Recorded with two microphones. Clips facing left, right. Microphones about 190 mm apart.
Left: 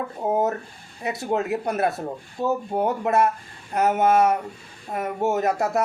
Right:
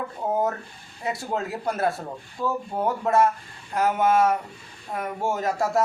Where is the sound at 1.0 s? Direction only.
20° left (ahead or behind).